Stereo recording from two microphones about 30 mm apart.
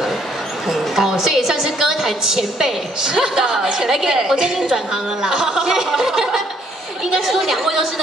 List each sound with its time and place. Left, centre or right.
0.9 s a woman's voice: centre
7.2 s a woman's voice: centre